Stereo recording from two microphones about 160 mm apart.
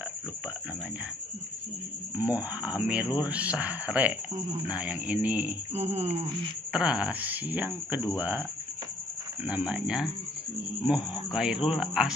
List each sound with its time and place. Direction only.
2.1 s speech: 10° right (ahead or behind)
5.7 s speech: 40° right (ahead or behind)
6.7 s speech: 5° right (ahead or behind)